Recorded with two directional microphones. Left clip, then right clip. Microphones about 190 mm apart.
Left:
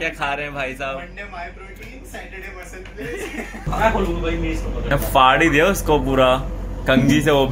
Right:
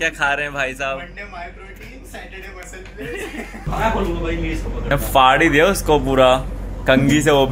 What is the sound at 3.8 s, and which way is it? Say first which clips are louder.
Speech: left 1 dB; centre (ahead or behind).